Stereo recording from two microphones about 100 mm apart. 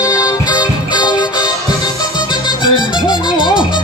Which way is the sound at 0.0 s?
35° left (ahead or behind).